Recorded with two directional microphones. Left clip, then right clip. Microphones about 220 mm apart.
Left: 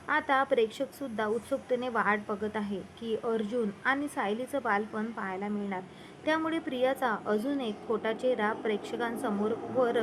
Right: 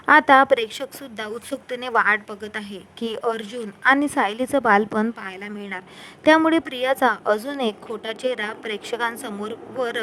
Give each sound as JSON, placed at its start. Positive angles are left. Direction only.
{"t": 0.0, "sound": "speech", "side_deg": -50}